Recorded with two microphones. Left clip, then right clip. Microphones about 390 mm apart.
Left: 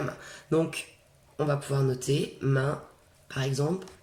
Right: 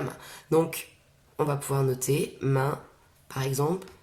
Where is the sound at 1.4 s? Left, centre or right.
Centre.